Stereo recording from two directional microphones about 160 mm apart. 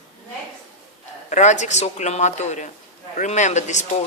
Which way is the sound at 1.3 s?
50° left (ahead or behind).